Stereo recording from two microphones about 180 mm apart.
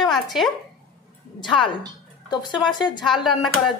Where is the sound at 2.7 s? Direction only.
25° left (ahead or behind).